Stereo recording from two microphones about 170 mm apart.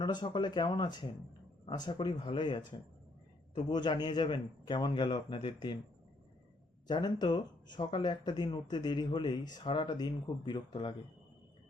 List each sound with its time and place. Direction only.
0.0 s speech: 25° left (ahead or behind)
6.8 s speech: 25° left (ahead or behind)